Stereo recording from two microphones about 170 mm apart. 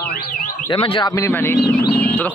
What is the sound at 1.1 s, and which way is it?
Speech, 15° left (ahead or behind).